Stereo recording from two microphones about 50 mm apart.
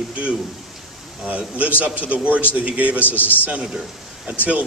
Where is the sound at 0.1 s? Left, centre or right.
Right.